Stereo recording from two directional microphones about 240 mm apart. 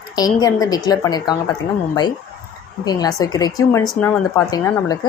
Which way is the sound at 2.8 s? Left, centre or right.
Centre.